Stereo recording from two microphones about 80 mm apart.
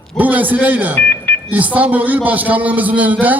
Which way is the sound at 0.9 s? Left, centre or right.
Left.